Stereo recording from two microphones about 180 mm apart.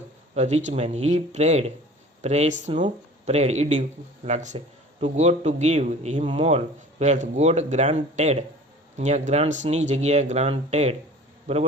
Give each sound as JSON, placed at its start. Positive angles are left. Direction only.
{"t": 0.3, "sound": "a man's voice", "side_deg": -40}